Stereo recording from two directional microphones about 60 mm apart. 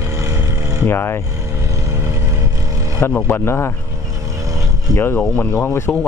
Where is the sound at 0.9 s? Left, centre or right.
Left.